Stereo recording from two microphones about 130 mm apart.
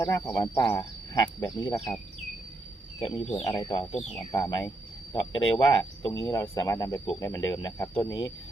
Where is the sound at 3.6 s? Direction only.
40° left (ahead or behind).